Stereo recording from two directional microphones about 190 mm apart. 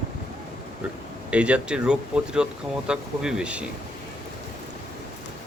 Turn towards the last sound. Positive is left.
turn(degrees=-5)  # may be behind; listen again after turning